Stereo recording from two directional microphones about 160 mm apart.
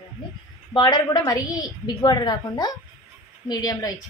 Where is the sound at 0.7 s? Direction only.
25° left (ahead or behind).